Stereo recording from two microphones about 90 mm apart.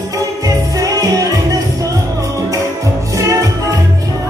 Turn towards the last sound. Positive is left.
turn(degrees=-40)  # may be behind; listen again after turning